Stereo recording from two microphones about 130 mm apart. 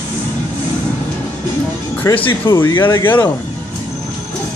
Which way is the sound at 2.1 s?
25° left (ahead or behind).